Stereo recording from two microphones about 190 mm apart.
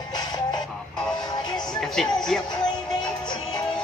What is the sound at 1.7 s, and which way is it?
Music, centre (ahead or behind).